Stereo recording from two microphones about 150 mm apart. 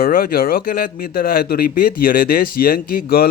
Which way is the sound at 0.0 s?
75° left (ahead or behind).